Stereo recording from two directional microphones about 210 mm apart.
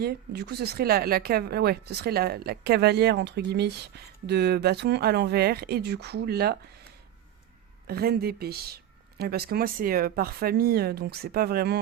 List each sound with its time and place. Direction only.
0.0 s speech: 50° right (ahead or behind)
7.9 s speech: 50° right (ahead or behind)